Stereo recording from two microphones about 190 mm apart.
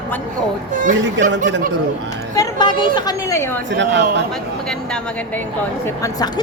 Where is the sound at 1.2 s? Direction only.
70° right (ahead or behind).